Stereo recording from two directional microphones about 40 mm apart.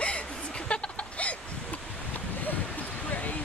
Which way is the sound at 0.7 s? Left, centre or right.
Left.